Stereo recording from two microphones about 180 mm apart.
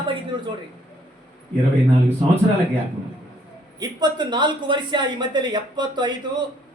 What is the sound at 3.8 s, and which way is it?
Speech, 25° right (ahead or behind).